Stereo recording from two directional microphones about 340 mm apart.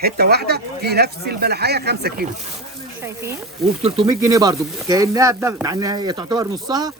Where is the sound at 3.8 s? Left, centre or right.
Centre.